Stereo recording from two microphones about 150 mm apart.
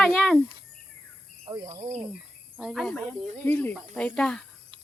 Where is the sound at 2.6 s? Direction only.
Centre (ahead or behind).